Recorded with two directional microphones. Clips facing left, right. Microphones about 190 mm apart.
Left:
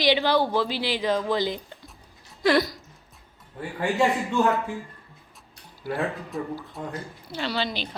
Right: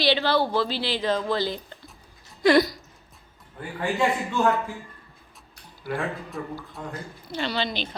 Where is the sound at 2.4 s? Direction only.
Centre (ahead or behind).